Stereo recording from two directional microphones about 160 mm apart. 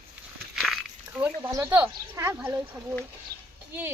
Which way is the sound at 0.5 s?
Centre (ahead or behind).